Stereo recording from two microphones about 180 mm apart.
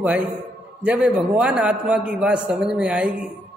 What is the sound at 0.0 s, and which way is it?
A man's voice, 10° right (ahead or behind).